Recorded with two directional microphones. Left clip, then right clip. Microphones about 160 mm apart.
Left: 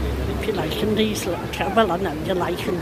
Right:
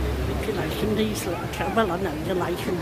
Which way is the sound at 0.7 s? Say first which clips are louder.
Left 4 dB; 15° right (ahead or behind).